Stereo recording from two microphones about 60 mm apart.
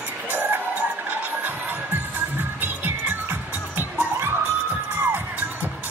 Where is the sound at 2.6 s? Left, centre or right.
Right.